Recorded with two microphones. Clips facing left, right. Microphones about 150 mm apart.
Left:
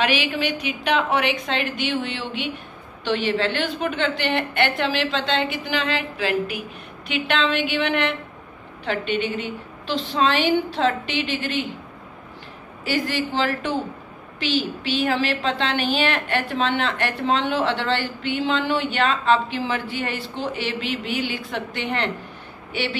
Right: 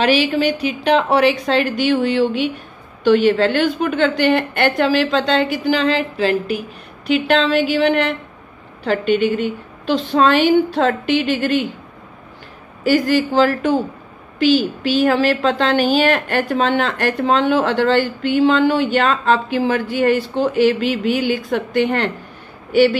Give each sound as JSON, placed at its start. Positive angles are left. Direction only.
{"t": 0.0, "sound": "a woman's voice", "side_deg": -35}
{"t": 12.8, "sound": "a woman's voice", "side_deg": -45}